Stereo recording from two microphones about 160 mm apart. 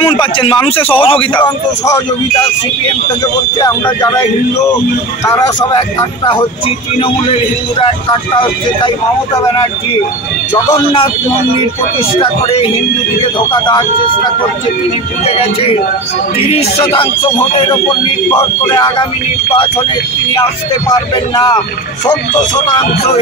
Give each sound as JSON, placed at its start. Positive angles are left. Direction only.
{"t": 0.0, "sound": "speech", "side_deg": 30}
{"t": 3.5, "sound": "speech", "side_deg": 25}
{"t": 5.2, "sound": "speech", "side_deg": 20}
{"t": 7.0, "sound": "speech", "side_deg": 40}
{"t": 12.2, "sound": "speech", "side_deg": 35}
{"t": 15.2, "sound": "speech", "side_deg": 40}
{"t": 18.3, "sound": "speech", "side_deg": 25}
{"t": 20.9, "sound": "speech", "side_deg": 25}